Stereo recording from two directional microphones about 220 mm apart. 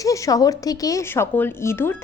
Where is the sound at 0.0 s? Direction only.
15° left (ahead or behind).